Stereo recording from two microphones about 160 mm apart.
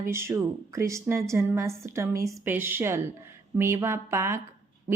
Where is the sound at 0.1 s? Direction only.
15° right (ahead or behind).